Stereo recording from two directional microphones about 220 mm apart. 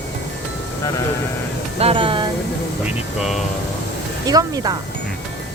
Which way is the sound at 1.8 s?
25° right (ahead or behind).